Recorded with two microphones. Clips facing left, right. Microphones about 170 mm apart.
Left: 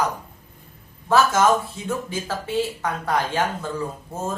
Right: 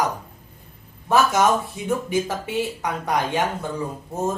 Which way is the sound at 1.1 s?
15° right (ahead or behind).